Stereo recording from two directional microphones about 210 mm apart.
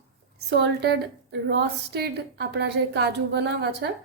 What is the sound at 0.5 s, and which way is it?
A woman's voice, 50° right (ahead or behind).